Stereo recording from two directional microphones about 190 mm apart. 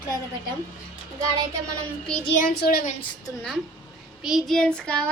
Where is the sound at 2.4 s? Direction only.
55° left (ahead or behind).